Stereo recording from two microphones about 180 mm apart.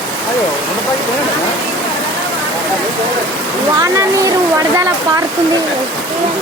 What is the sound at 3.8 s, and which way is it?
Speech, 20° right (ahead or behind).